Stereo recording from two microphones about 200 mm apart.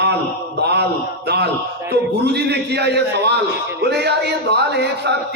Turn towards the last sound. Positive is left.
turn(degrees=-55)  # may be behind; listen again after turning